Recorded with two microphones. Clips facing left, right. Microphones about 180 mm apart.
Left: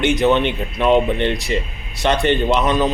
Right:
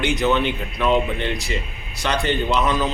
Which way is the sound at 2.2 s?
20° left (ahead or behind).